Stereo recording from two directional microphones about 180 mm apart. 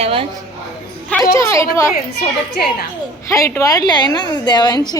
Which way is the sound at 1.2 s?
15° left (ahead or behind).